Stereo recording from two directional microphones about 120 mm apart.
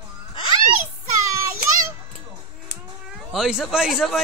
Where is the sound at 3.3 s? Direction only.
Centre (ahead or behind).